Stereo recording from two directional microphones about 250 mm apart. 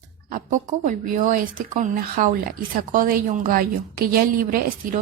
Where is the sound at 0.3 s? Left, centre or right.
Right.